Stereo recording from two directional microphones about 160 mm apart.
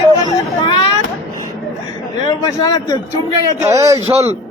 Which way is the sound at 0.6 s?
30° left (ahead or behind).